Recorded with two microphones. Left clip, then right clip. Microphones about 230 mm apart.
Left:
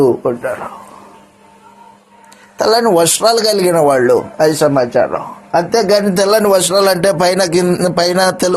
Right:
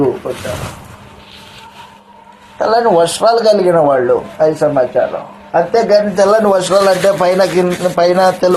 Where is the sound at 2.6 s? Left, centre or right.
Left.